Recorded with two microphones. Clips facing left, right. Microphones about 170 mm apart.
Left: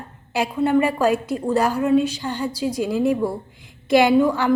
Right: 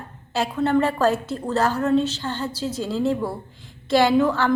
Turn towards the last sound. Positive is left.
turn(degrees=10)  # may be behind; listen again after turning